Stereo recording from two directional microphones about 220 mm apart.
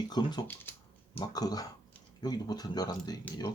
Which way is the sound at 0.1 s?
20° left (ahead or behind).